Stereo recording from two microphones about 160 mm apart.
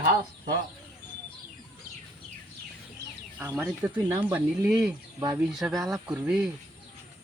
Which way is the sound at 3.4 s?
15° right (ahead or behind).